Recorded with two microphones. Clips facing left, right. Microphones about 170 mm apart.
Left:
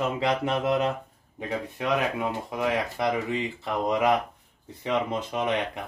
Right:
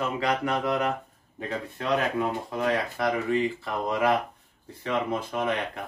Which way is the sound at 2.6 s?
20° left (ahead or behind).